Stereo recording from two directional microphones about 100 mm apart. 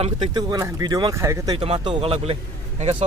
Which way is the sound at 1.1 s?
30° right (ahead or behind).